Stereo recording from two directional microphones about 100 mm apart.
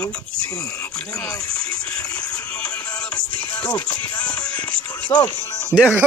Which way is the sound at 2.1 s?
10° left (ahead or behind).